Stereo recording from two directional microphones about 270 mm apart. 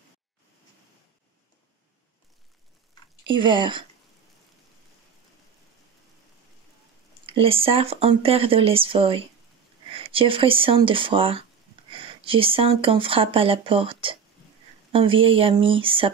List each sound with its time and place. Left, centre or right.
3.3 s speech: centre
7.2 s speech: centre